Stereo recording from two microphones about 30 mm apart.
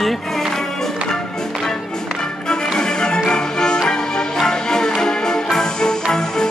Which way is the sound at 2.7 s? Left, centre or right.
Left.